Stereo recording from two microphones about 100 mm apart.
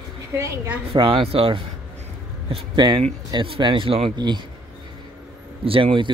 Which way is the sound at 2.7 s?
50° right (ahead or behind).